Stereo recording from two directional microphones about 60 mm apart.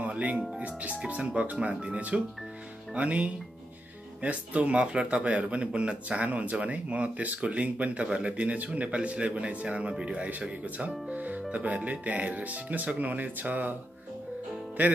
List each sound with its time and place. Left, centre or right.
0.0 s speech: right
14.8 s speech: right